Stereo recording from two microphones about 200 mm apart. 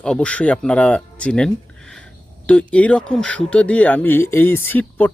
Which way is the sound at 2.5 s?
5° left (ahead or behind).